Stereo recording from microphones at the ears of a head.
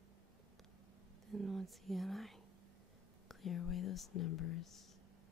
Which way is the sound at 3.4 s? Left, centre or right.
Left.